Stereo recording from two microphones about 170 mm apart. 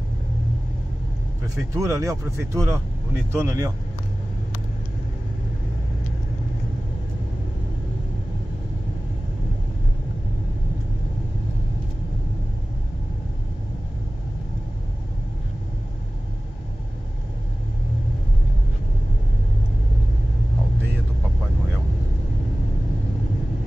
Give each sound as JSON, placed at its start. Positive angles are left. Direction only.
{"t": 1.4, "sound": "speech", "side_deg": -20}